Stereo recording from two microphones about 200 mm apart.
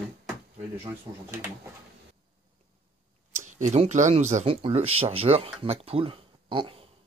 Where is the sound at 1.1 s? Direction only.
20° right (ahead or behind).